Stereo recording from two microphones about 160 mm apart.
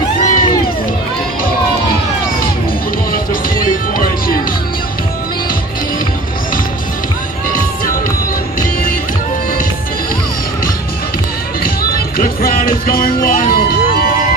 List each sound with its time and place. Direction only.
0.2 s music: 55° left (ahead or behind)
3.1 s music: 60° left (ahead or behind)
12.4 s music: 65° left (ahead or behind)